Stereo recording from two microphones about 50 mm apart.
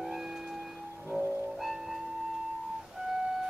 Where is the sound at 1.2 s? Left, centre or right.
Right.